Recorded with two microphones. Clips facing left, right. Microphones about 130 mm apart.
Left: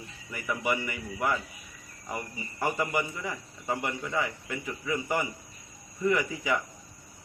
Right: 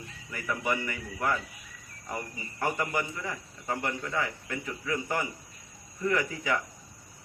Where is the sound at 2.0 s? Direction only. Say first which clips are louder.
Even; 5° left (ahead or behind).